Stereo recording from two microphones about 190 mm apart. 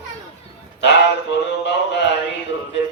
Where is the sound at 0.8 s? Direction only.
65° left (ahead or behind).